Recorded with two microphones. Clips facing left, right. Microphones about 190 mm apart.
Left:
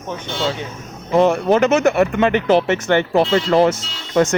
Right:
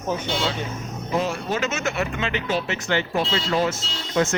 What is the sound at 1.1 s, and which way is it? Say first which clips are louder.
Speech: left 11 dB; 60° left (ahead or behind).